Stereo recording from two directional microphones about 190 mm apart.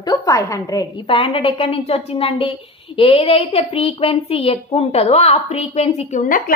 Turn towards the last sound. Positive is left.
turn(degrees=45)  # may be behind; listen again after turning